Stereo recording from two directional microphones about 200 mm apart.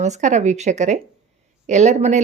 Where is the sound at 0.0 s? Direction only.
35° right (ahead or behind).